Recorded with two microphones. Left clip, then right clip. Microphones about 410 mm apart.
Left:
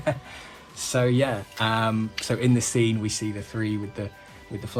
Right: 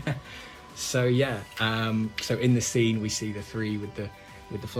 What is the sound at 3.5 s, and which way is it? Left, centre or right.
Speech, left.